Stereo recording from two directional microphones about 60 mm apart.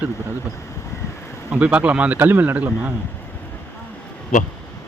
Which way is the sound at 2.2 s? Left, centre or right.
Right.